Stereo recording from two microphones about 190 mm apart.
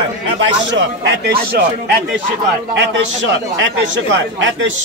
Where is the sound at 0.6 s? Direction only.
70° right (ahead or behind).